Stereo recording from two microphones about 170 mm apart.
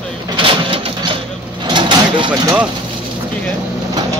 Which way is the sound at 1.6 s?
25° right (ahead or behind).